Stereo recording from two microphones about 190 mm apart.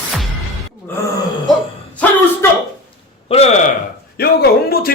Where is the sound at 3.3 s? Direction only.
35° left (ahead or behind).